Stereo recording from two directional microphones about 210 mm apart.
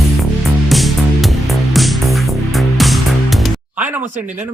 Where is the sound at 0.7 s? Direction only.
Centre (ahead or behind).